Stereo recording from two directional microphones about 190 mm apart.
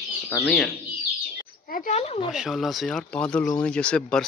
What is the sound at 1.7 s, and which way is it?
Speech, 40° left (ahead or behind).